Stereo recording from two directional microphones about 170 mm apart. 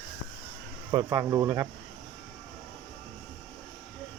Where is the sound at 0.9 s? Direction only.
25° right (ahead or behind).